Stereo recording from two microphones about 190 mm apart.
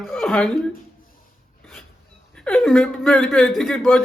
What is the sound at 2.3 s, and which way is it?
A man's voice, 5° left (ahead or behind).